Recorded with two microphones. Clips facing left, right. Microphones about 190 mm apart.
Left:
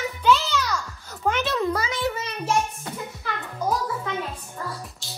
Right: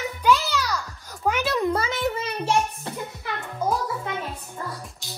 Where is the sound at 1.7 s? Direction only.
25° right (ahead or behind).